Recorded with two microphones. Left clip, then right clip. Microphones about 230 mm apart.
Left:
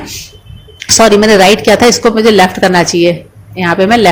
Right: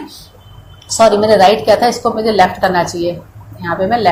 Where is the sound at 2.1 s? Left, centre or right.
Left.